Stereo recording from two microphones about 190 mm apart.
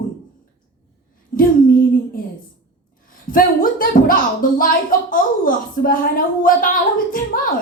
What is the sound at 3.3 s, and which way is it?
A woman's voice, 45° left (ahead or behind).